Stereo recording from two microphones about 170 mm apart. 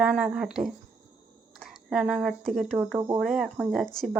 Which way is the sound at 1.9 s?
Centre (ahead or behind).